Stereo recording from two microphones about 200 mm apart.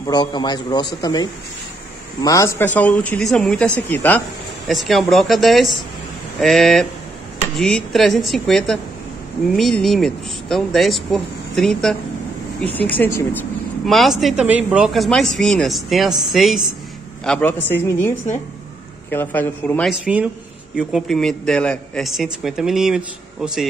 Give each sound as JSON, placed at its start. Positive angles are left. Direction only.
{"t": 0.0, "sound": "a man's voice", "side_deg": 20}
{"t": 19.9, "sound": "a man's voice", "side_deg": -5}